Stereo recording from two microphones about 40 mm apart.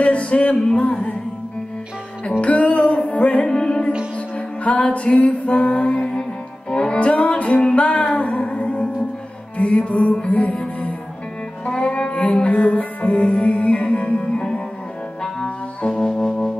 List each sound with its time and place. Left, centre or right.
0.0 s a sound: left
2.4 s music: left
3.4 s music: centre
4.6 s music: left
6.7 s music: left
7.1 s music: left
12.4 s music: left
15.9 s music: centre